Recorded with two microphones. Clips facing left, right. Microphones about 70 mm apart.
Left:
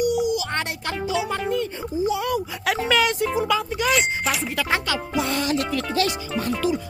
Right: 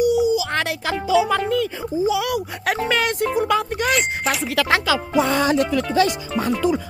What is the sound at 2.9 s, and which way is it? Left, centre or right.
Speech, right.